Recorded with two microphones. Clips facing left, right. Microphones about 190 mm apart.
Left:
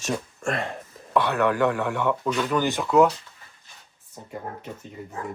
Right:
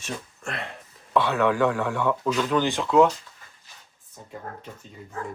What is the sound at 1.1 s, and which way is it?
Speech, centre (ahead or behind).